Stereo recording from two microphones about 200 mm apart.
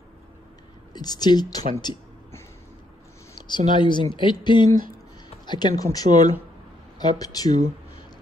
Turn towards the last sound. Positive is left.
turn(degrees=20)  # may be behind; listen again after turning